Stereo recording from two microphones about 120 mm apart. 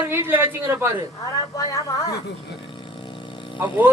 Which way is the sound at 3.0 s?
45° left (ahead or behind).